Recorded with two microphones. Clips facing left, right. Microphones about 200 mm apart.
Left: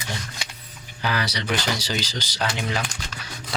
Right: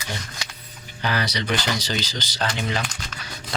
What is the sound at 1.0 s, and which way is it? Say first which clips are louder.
Speech: right 1 dB; 10° left (ahead or behind).